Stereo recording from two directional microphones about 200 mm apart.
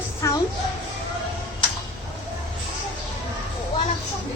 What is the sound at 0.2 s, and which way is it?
Music, 15° left (ahead or behind).